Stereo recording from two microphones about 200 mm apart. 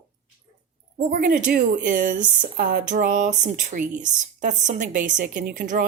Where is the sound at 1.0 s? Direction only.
40° right (ahead or behind).